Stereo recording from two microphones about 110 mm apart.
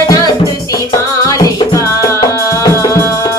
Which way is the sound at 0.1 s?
35° left (ahead or behind).